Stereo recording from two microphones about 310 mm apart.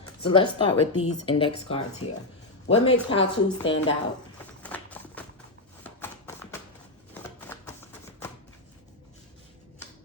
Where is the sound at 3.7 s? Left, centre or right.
Left.